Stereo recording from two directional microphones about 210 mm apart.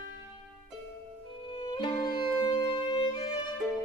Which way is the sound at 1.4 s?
25° left (ahead or behind).